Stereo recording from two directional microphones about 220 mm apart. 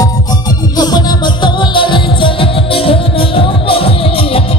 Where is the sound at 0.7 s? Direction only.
20° left (ahead or behind).